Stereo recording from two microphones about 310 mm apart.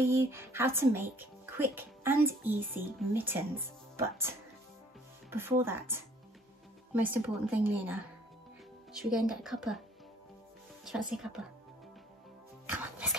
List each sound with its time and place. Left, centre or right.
0.0 s a woman's voice: centre
10.9 s a woman's voice: centre
12.7 s speech: centre